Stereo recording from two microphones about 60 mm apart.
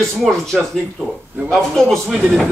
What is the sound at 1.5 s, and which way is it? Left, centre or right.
Speech, centre.